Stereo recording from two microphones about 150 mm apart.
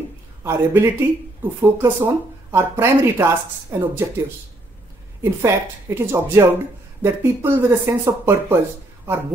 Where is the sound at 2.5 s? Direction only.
20° right (ahead or behind).